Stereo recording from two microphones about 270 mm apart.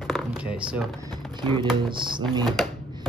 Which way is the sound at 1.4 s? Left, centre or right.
Centre.